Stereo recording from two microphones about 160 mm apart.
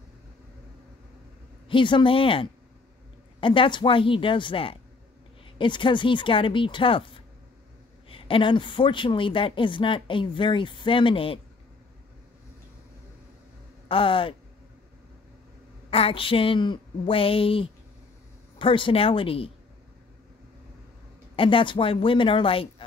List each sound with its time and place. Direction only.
1.7 s speech: 30° left (ahead or behind)
13.8 s speech: 35° left (ahead or behind)
15.9 s speech: 35° left (ahead or behind)
21.4 s speech: 35° left (ahead or behind)